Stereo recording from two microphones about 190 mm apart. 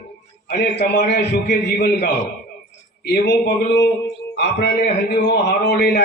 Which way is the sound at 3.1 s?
60° left (ahead or behind).